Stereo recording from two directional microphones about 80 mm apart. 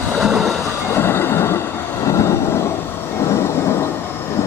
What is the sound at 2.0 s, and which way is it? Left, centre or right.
Vehicle, left.